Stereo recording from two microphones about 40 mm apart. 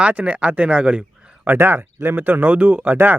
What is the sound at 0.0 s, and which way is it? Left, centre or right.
Speech, right.